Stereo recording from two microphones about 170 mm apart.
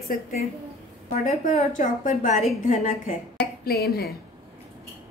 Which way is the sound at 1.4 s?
45° left (ahead or behind).